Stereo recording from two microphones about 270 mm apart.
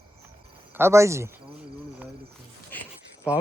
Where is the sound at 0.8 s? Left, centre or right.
Centre.